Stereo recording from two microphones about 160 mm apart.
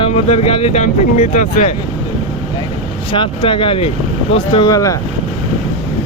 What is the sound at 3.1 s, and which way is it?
Speech, 35° left (ahead or behind).